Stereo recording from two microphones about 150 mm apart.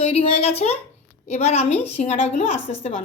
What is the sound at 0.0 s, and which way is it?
A woman's voice, 45° left (ahead or behind).